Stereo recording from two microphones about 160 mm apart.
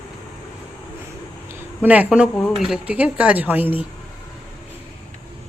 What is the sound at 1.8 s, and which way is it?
Speech, 10° right (ahead or behind).